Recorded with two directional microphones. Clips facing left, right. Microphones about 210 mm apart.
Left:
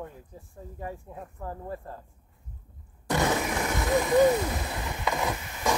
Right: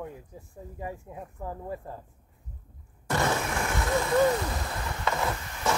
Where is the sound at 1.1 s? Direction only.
5° right (ahead or behind).